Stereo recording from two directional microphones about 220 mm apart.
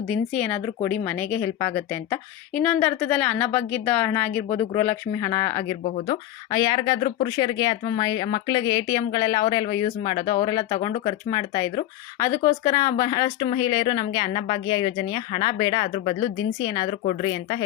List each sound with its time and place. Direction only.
0.1 s speech: 5° left (ahead or behind)
17.0 s speech: 35° left (ahead or behind)